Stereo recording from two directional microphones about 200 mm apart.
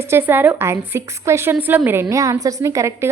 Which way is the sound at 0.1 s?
10° right (ahead or behind).